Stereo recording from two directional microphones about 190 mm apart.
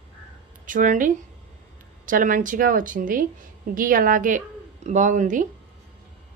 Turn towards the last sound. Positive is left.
turn(degrees=-40)  # may be behind; listen again after turning